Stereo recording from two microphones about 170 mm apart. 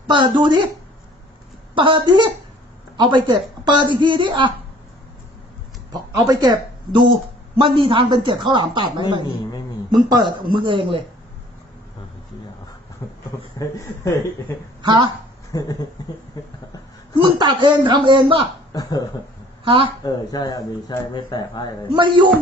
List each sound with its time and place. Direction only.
0.1 s a woman's voice: 30° right (ahead or behind)
1.7 s a woman's voice: 30° right (ahead or behind)
5.9 s a woman's voice: 20° right (ahead or behind)
13.0 s a sound: 20° left (ahead or behind)
13.6 s speech: 20° left (ahead or behind)
14.8 s speech: 25° right (ahead or behind)
15.5 s speech: 20° left (ahead or behind)
17.2 s a woman's voice: 25° right (ahead or behind)
18.7 s speech: 20° left (ahead or behind)
19.6 s speech: 30° right (ahead or behind)
20.1 s speech: 25° left (ahead or behind)
21.9 s a woman's voice: 30° right (ahead or behind)